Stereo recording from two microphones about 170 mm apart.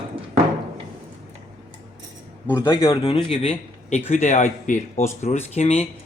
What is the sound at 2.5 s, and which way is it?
Speech, 20° left (ahead or behind).